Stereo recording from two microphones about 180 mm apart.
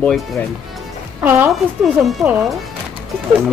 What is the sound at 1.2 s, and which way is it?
Speech, 10° right (ahead or behind).